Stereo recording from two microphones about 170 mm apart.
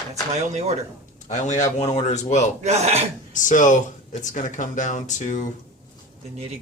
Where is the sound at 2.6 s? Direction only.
40° right (ahead or behind).